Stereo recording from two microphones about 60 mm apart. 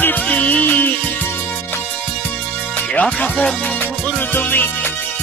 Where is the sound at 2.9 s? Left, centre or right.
Left.